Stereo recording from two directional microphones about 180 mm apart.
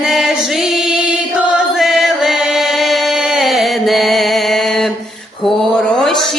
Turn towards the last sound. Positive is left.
turn(degrees=0)  # may be behind; listen again after turning